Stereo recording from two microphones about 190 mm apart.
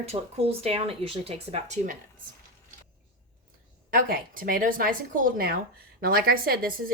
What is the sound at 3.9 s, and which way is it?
Speech, 50° right (ahead or behind).